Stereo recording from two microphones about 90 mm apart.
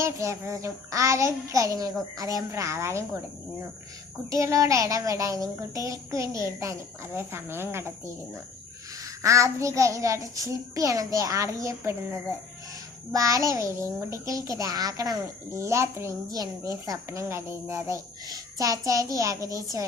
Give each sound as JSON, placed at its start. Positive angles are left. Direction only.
{"t": 0.0, "sound": "child singing", "side_deg": -35}
{"t": 4.3, "sound": "child singing", "side_deg": -35}
{"t": 13.1, "sound": "child singing", "side_deg": -40}
{"t": 15.5, "sound": "child singing", "side_deg": -30}
{"t": 16.3, "sound": "child singing", "side_deg": -45}